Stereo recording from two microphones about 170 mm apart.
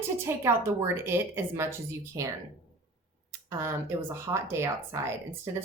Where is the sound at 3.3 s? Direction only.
15° right (ahead or behind).